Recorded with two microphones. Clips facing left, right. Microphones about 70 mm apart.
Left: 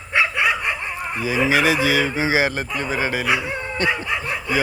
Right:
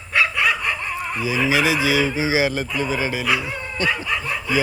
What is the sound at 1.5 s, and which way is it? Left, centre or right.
Speech, left.